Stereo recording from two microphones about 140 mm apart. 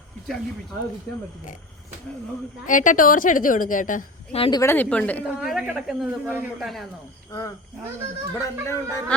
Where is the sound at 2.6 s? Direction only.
70° left (ahead or behind).